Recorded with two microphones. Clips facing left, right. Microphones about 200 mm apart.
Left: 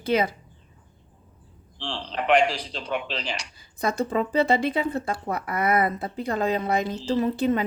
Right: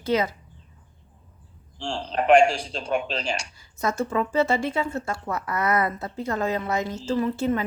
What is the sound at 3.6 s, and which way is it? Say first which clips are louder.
Speech: left 3 dB; 15° left (ahead or behind).